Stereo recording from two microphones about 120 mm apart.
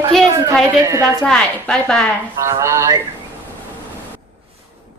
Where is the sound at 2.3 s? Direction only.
25° right (ahead or behind).